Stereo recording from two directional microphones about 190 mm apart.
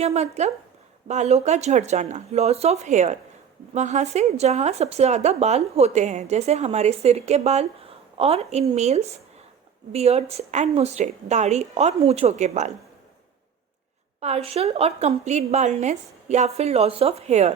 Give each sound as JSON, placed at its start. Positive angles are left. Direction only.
{"t": 0.0, "sound": "speech", "side_deg": -35}
{"t": 14.2, "sound": "speech", "side_deg": -35}